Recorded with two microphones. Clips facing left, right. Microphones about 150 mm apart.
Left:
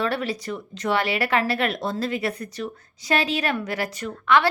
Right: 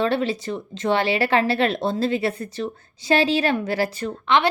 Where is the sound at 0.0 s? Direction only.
25° right (ahead or behind).